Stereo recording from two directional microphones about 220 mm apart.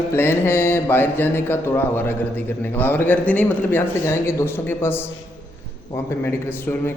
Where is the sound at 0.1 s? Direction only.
10° left (ahead or behind).